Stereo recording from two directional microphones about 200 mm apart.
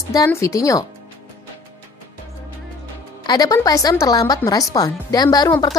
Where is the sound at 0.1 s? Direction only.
15° left (ahead or behind).